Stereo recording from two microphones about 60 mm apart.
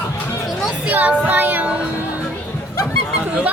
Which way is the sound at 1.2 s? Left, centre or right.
Right.